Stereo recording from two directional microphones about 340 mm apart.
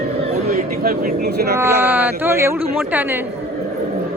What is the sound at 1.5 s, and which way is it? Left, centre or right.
Speech, centre.